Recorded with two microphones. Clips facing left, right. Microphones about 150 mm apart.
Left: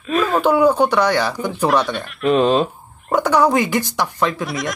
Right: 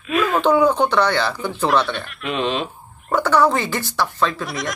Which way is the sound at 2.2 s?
40° left (ahead or behind).